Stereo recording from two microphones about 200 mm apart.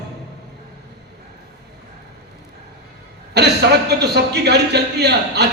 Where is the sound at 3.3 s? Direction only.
55° right (ahead or behind).